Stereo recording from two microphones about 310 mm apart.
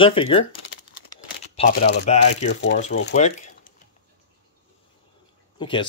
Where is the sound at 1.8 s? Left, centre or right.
Left.